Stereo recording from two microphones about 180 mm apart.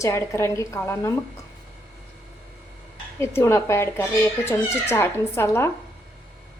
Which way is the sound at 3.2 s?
15° left (ahead or behind).